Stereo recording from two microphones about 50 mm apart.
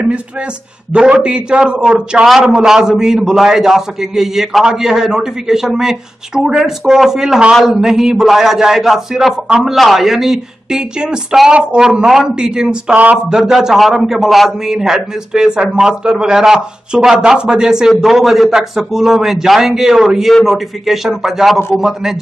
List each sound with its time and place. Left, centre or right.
0.9 s speech: centre
12.9 s speech: right
13.3 s a man's voice: centre